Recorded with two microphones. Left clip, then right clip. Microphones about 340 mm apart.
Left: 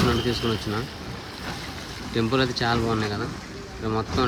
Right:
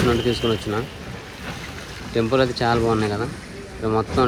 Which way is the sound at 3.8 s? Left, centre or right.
Right.